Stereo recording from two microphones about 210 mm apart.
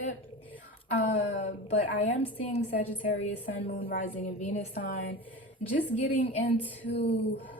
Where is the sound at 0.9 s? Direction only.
40° left (ahead or behind).